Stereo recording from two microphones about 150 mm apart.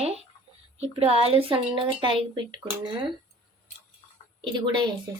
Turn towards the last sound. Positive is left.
turn(degrees=-30)  # may be behind; listen again after turning